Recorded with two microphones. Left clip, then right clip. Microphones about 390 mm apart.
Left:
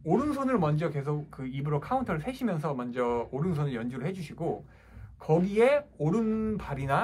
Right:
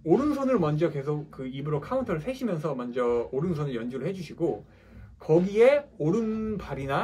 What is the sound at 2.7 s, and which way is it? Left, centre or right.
Speech, left.